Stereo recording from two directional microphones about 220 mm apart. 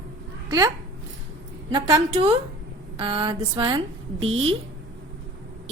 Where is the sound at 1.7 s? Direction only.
20° right (ahead or behind).